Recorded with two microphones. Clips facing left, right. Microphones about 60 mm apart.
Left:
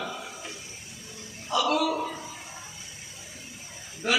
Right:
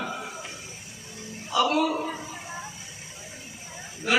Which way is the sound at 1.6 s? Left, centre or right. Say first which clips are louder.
Right 3 dB; right.